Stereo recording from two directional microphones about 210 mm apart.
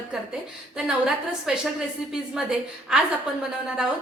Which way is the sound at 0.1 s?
5° right (ahead or behind).